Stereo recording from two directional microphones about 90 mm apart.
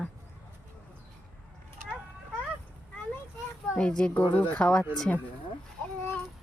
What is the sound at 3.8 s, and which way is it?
Speech, 10° left (ahead or behind).